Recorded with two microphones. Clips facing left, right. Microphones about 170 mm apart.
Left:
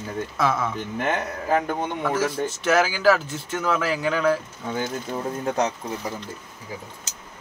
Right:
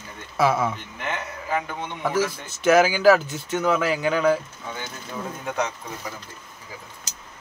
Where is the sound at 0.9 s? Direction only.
45° left (ahead or behind).